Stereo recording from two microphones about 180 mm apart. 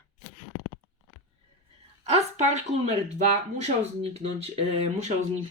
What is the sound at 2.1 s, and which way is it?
Speech, 40° right (ahead or behind).